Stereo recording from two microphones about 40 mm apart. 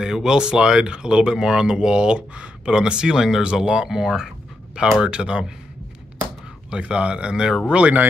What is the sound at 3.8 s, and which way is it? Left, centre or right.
Speech, centre.